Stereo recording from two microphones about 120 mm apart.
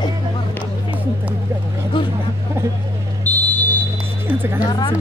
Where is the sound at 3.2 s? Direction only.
15° left (ahead or behind).